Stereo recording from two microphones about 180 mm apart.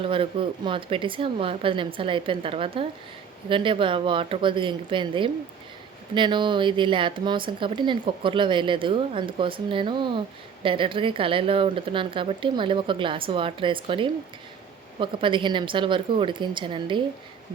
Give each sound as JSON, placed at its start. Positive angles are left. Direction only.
{"t": 0.0, "sound": "speech", "side_deg": -30}